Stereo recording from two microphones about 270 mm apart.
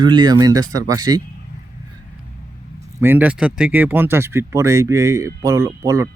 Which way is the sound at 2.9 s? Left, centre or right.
Centre.